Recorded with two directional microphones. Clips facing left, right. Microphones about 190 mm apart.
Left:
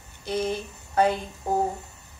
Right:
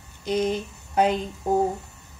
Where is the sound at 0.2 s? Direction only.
15° right (ahead or behind).